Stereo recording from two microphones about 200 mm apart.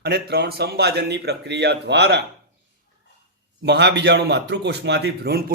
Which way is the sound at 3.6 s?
55° right (ahead or behind).